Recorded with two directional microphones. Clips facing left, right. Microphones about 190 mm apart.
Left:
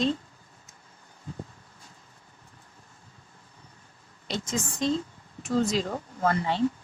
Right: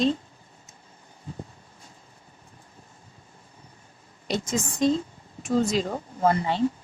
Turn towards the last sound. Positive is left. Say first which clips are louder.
# right 3 dB
turn(degrees=-20)  # may be behind; listen again after turning